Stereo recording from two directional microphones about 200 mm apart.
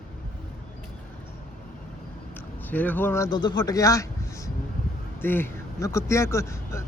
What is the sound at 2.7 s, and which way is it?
Speech, 10° left (ahead or behind).